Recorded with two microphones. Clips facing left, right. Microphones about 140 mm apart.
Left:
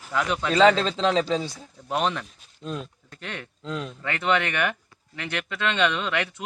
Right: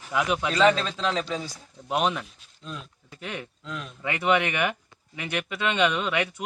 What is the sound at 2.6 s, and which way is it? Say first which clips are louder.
Speech: left 6 dB; 40° left (ahead or behind).